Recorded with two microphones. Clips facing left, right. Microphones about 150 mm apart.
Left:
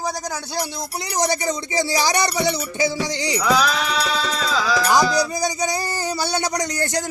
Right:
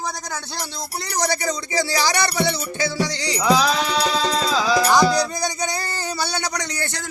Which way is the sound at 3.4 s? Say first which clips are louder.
Right 2 dB; 30° right (ahead or behind).